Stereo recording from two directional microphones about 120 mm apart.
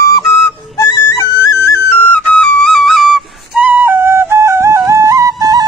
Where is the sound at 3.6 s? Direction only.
20° right (ahead or behind).